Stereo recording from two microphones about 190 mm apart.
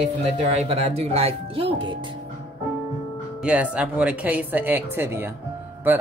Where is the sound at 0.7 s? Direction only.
35° right (ahead or behind).